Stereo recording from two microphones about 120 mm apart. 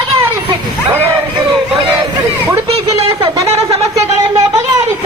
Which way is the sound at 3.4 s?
60° right (ahead or behind).